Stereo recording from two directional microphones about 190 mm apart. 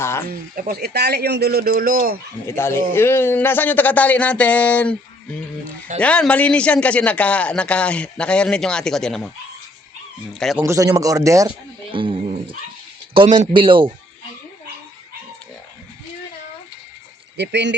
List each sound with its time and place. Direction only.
0.0 s speech: 15° left (ahead or behind)
0.3 s speech: 55° right (ahead or behind)
2.5 s a man's voice: 15° left (ahead or behind)
6.0 s a man's voice: 5° left (ahead or behind)
10.6 s a man's voice: 20° right (ahead or behind)
17.3 s speech: 65° right (ahead or behind)